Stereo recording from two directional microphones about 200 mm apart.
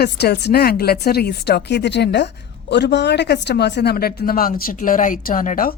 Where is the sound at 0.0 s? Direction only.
55° left (ahead or behind).